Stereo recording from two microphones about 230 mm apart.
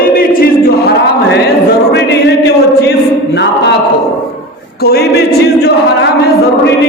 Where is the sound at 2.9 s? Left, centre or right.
Left.